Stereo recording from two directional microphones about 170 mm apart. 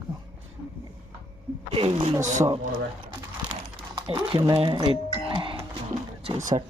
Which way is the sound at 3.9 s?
25° right (ahead or behind).